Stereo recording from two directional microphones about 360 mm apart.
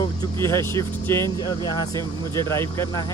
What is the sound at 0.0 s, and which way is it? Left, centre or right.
Speech, centre.